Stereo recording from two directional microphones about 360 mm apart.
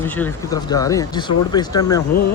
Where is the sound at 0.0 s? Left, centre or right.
Centre.